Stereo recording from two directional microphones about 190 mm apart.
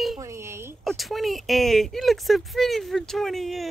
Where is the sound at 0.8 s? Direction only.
Centre (ahead or behind).